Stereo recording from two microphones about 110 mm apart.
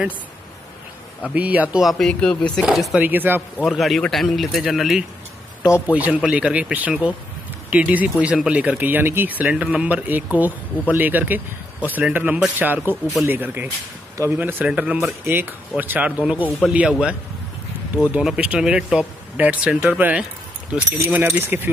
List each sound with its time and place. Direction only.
1.3 s a man's voice: 15° right (ahead or behind)
1.8 s speech: centre (ahead or behind)
2.6 s speech: 5° right (ahead or behind)
3.0 s a man's voice: 15° right (ahead or behind)
3.6 s speech: centre (ahead or behind)
5.6 s a man's voice: 20° left (ahead or behind)
5.9 s a man's voice: 10° right (ahead or behind)
15.0 s a man's voice: 20° right (ahead or behind)